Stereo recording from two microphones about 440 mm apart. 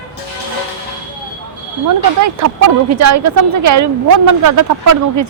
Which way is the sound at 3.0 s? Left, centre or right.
Right.